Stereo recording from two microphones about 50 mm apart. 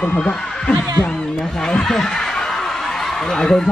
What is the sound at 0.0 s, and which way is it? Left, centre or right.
Speech, left.